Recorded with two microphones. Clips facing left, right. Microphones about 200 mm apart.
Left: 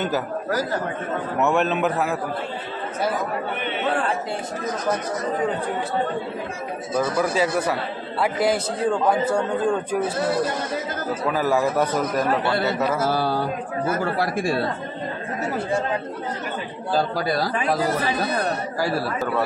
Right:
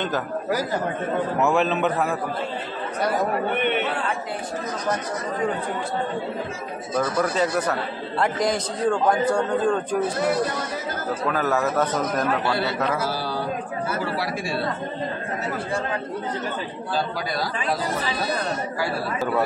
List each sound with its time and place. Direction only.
1.4 s a man's voice: centre (ahead or behind)
3.5 s a man's voice: 60° right (ahead or behind)
7.0 s a man's voice: 5° left (ahead or behind)
11.3 s a man's voice: 10° left (ahead or behind)
13.0 s speech: 55° left (ahead or behind)
16.9 s speech: 45° left (ahead or behind)